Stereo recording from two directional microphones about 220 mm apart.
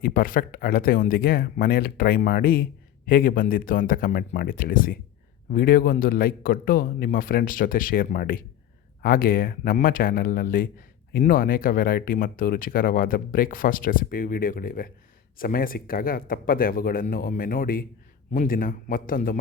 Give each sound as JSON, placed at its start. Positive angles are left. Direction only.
{"t": 0.0, "sound": "speech", "side_deg": 40}